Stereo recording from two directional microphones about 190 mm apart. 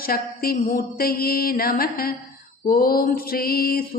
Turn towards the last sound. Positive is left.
turn(degrees=50)  # may be behind; listen again after turning